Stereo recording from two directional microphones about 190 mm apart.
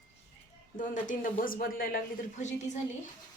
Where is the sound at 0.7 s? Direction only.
45° left (ahead or behind).